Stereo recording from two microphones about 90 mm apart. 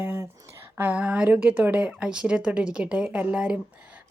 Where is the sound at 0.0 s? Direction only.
25° right (ahead or behind).